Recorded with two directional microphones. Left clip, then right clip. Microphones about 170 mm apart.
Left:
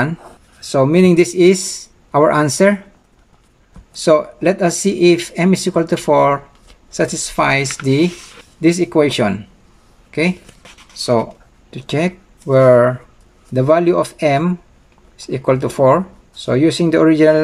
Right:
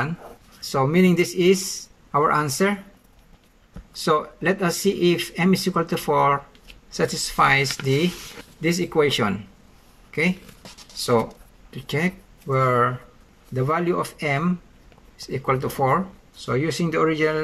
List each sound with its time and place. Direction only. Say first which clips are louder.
0.6 s speech: left 8 dB; 20° left (ahead or behind)
3.9 s speech: left 9 dB; 20° left (ahead or behind)
11.0 s speech: left 5 dB; 20° left (ahead or behind)